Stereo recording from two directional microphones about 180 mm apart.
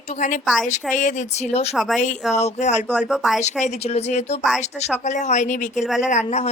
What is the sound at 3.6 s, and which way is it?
Speech, 40° left (ahead or behind).